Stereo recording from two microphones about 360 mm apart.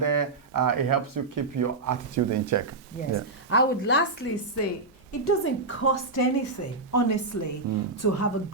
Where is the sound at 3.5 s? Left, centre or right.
Left.